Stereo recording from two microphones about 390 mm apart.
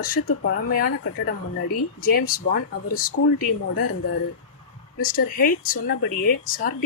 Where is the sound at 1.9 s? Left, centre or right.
Left.